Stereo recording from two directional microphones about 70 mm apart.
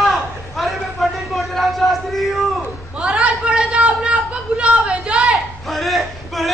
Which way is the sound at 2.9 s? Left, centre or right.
Centre.